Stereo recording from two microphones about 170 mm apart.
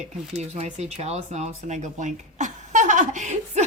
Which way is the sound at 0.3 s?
40° right (ahead or behind).